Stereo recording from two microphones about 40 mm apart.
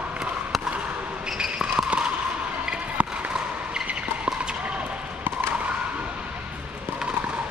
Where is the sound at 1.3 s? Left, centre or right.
Centre.